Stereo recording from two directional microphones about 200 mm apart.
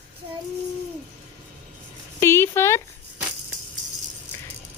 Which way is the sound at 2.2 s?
15° left (ahead or behind).